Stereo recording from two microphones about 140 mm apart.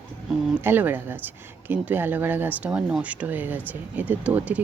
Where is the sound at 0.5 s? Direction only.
15° right (ahead or behind).